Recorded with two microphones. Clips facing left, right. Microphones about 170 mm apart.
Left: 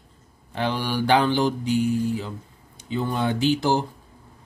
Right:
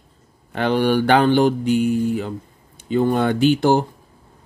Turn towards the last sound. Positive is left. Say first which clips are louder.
# right 6 dB
turn(degrees=-55)  # may be behind; listen again after turning